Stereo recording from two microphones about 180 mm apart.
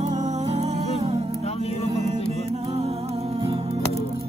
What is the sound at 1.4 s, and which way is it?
Music, 35° left (ahead or behind).